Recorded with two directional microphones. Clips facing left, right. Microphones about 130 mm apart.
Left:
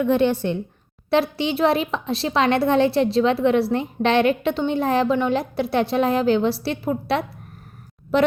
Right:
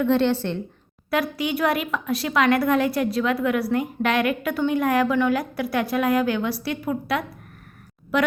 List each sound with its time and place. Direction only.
0.0 s a woman's voice: 15° left (ahead or behind)
1.1 s a woman's voice: 25° left (ahead or behind)